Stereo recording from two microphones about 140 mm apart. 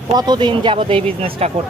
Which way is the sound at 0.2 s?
30° right (ahead or behind).